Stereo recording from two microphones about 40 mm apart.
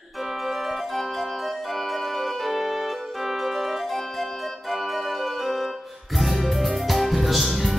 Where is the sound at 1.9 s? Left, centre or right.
Centre.